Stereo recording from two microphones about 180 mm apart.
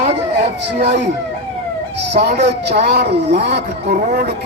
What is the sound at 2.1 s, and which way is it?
Speech, 65° right (ahead or behind).